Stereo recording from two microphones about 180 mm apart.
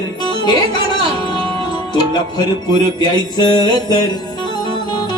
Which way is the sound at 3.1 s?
20° left (ahead or behind).